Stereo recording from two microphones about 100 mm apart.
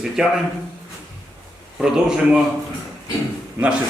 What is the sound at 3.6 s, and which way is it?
Speech, 25° right (ahead or behind).